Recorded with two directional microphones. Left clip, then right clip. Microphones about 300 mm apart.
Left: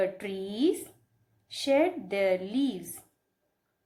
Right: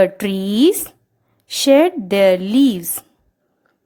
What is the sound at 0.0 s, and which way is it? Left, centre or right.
A woman's voice, right.